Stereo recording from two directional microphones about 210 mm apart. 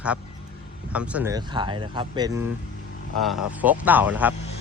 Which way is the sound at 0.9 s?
5° right (ahead or behind).